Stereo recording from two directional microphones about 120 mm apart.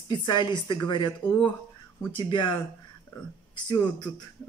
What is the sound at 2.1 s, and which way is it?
Speech, 40° left (ahead or behind).